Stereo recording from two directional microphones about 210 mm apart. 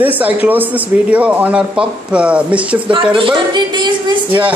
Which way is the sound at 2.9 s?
25° right (ahead or behind).